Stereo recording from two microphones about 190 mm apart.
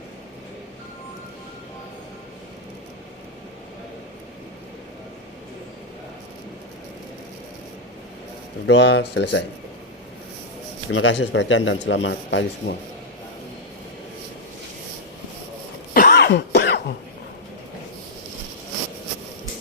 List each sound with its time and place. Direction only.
8.6 s speech: 65° left (ahead or behind)
10.8 s speech: 85° left; by 12.7 s 70° left (ahead or behind)
16.0 s cough: 55° left (ahead or behind)